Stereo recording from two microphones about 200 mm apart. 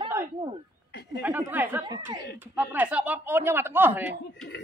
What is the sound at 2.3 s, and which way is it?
Speech, 5° right (ahead or behind).